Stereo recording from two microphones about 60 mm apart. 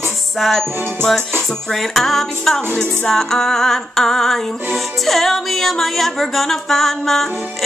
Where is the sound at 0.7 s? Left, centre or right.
Right.